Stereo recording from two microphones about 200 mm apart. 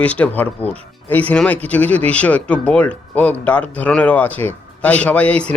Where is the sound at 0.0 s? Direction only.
5° left (ahead or behind).